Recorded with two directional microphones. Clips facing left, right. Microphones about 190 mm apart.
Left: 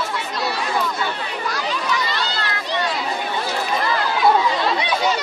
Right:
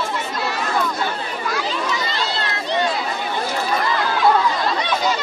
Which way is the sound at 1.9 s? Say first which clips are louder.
Even; 25° right (ahead or behind).